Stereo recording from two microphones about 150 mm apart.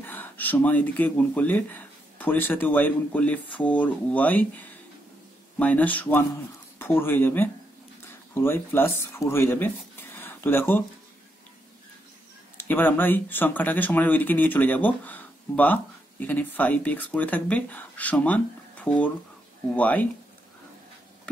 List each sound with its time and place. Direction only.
0.0 s speech: 15° left (ahead or behind)
12.5 s speech: 15° left (ahead or behind)